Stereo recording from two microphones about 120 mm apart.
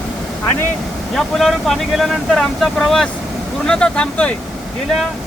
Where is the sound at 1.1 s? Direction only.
Centre (ahead or behind).